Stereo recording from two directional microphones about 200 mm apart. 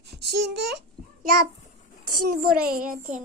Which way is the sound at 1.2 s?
45° right (ahead or behind).